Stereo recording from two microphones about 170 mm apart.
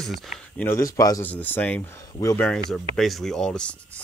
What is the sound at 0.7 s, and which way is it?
Speech, 20° left (ahead or behind).